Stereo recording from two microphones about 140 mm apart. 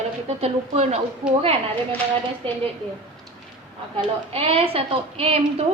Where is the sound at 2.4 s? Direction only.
40° right (ahead or behind).